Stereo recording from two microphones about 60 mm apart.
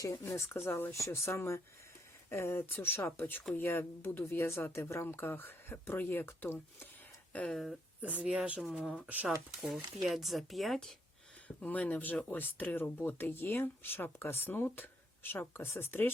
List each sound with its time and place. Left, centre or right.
0.0 s speech: left
5.0 s speech: left
7.5 s speech: centre
8.0 s speech: right
8.6 s speech: centre
11.4 s speech: left